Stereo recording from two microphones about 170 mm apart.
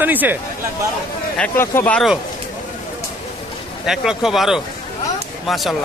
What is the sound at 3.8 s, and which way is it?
Speech, 5° right (ahead or behind).